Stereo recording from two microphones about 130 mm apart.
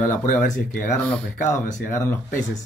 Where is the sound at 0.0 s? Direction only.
80° left.